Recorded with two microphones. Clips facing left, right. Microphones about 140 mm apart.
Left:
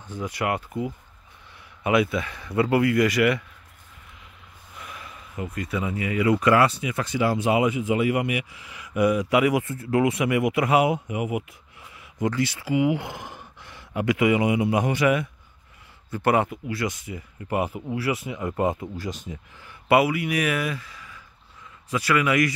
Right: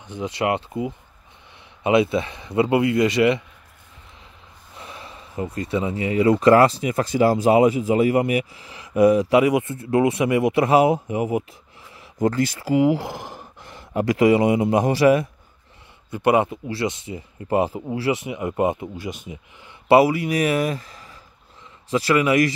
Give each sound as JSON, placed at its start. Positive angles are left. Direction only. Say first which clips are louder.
{"t": 0.0, "sound": "speech", "louder": "right 4 dB", "side_deg": -20}
{"t": 4.7, "sound": "speech", "louder": "right 2 dB", "side_deg": -30}
{"t": 16.1, "sound": "speech", "louder": "right 3 dB", "side_deg": -20}
{"t": 19.9, "sound": "speech", "louder": "right 5 dB", "side_deg": -35}
{"t": 21.9, "sound": "speech", "louder": "right 4 dB", "side_deg": -30}